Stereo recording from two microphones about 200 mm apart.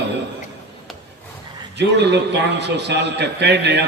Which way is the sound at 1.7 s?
60° right (ahead or behind).